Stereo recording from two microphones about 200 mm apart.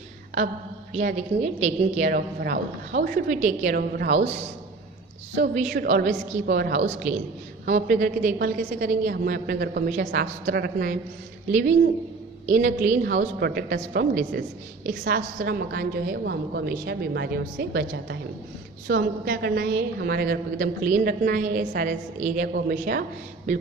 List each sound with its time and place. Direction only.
0.9 s a woman's voice: 35° right (ahead or behind)
2.1 s a woman's voice: 50° right (ahead or behind)
4.1 s a woman's voice: 35° right (ahead or behind)
5.7 s a woman's voice: 55° right (ahead or behind)
6.8 s a woman's voice: 35° right (ahead or behind); by 10.9 s 50° right (ahead or behind)
11.5 s a woman's voice: 40° right (ahead or behind)
13.1 s a woman's voice: 60° right (ahead or behind)